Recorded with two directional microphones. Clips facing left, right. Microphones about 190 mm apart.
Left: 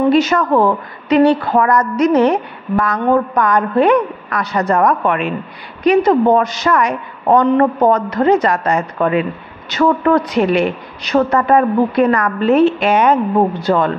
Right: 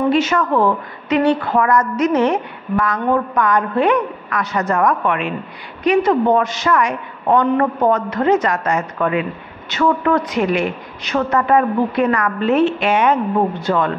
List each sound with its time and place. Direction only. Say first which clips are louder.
0.1 s a woman's voice: left 3 dB; 40° left (ahead or behind)